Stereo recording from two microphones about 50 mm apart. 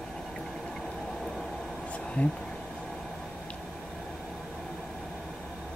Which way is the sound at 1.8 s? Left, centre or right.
Left.